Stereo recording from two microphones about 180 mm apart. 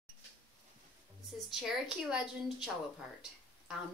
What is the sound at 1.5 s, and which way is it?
A woman's voice, 5° right (ahead or behind).